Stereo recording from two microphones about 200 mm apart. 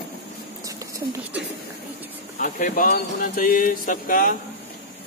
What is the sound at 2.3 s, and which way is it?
Speech, 40° left (ahead or behind).